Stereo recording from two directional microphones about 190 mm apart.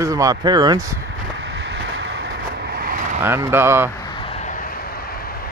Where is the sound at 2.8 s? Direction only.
45° right (ahead or behind).